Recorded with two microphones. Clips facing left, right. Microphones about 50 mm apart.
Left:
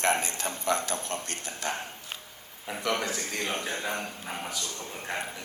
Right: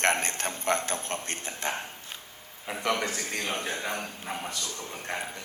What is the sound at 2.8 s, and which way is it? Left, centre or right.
Speech, right.